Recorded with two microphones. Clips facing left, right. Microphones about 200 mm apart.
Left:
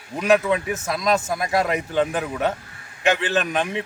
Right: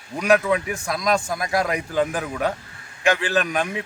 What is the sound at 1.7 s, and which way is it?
Speech, 25° left (ahead or behind).